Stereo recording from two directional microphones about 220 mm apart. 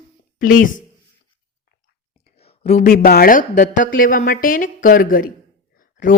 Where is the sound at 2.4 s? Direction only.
30° left (ahead or behind).